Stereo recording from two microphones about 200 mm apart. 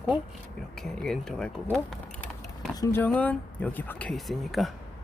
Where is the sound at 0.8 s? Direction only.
Centre (ahead or behind).